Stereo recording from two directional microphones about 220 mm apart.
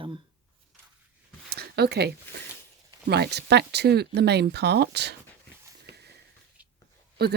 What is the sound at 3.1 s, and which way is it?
Speech, 50° right (ahead or behind).